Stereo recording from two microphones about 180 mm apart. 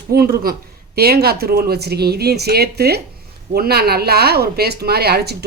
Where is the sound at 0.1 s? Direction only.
55° right (ahead or behind).